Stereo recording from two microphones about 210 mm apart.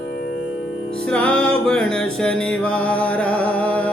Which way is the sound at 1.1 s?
5° left (ahead or behind).